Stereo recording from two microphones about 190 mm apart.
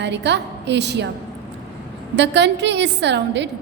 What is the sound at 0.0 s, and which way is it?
A woman's voice, 65° right (ahead or behind).